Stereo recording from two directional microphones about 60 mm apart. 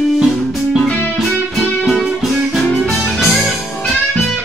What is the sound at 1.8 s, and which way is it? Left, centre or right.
Music, centre.